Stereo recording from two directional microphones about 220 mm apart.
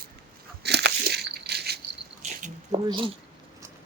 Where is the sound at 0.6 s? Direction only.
50° right (ahead or behind).